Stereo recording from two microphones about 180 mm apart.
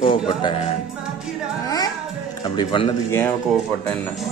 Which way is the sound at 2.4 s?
25° left (ahead or behind).